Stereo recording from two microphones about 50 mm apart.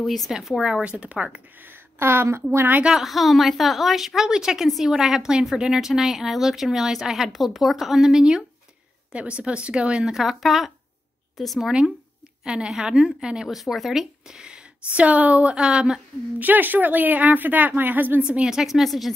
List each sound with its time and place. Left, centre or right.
0.0 s a woman's voice: centre
0.3 s a woman's voice: centre
0.9 s a woman's voice: right
1.6 s a sound: right
2.9 s a woman's voice: centre
9.1 s a woman's voice: right
10.1 s a woman's voice: centre
12.4 s a woman's voice: centre
13.5 s speech: centre
14.9 s a woman's voice: right
15.5 s a woman's voice: centre
16.3 s speech: right
18.2 s a woman's voice: centre